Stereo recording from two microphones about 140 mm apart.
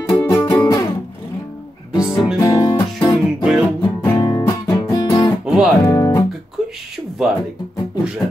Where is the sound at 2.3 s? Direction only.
25° left (ahead or behind).